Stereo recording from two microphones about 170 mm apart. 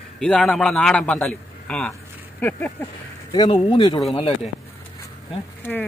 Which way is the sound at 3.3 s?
25° left (ahead or behind).